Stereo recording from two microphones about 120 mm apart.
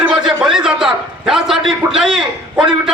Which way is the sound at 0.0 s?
5° right (ahead or behind).